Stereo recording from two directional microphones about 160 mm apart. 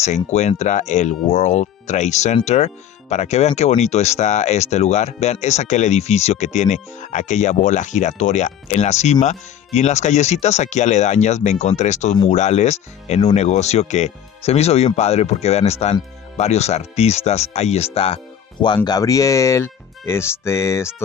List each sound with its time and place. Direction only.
0.0 s speech: 45° left (ahead or behind)
18.9 s speech: 20° left (ahead or behind)